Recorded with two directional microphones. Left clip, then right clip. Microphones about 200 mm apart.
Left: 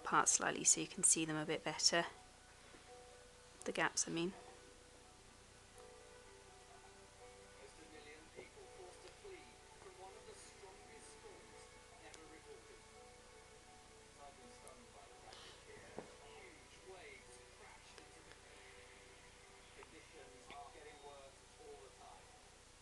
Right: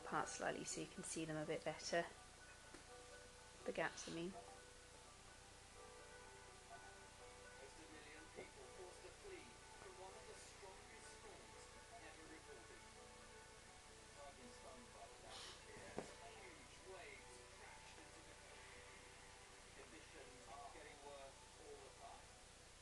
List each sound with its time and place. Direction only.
0.0 s speech: 30° left (ahead or behind)
3.6 s speech: 30° left (ahead or behind)